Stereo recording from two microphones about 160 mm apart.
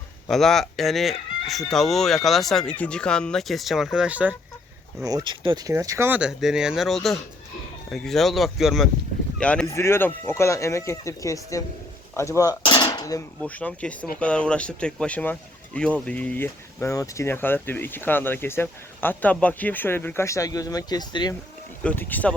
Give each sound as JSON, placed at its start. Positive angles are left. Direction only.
{"t": 0.3, "sound": "speech", "side_deg": 0}
{"t": 5.0, "sound": "speech", "side_deg": -25}
{"t": 6.1, "sound": "speech", "side_deg": -5}
{"t": 9.6, "sound": "speech", "side_deg": 15}
{"t": 13.4, "sound": "speech", "side_deg": 10}
{"t": 21.8, "sound": "speech", "side_deg": 10}